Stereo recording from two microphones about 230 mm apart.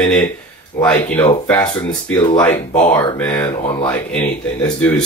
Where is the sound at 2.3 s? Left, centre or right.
Centre.